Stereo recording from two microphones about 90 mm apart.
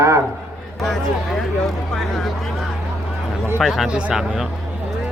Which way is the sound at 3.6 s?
Centre (ahead or behind).